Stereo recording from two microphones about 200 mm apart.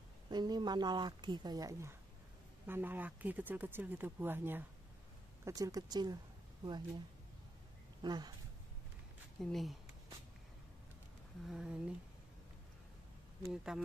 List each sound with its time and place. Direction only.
0.3 s a woman's voice: 20° right (ahead or behind)
8.0 s speech: 20° right (ahead or behind)
9.4 s speech: centre (ahead or behind)
11.4 s speech: 5° right (ahead or behind)
13.4 s speech: centre (ahead or behind)